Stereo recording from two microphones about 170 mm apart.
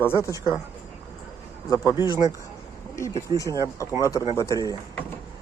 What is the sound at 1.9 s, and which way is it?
Speech, 15° right (ahead or behind).